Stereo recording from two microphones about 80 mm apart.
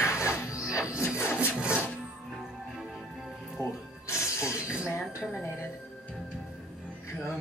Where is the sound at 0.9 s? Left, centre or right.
Left.